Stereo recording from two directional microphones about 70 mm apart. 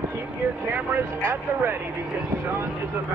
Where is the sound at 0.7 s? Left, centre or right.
Right.